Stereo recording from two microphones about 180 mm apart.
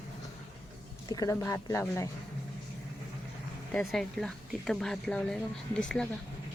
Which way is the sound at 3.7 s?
5° left (ahead or behind).